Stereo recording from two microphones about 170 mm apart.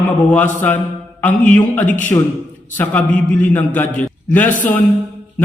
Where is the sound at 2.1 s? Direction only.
20° left (ahead or behind).